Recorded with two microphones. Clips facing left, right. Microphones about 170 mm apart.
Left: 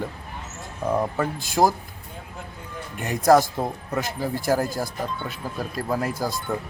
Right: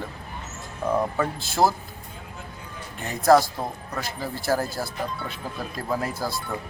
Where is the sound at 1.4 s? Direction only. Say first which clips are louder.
Left 2 dB; 15° left (ahead or behind).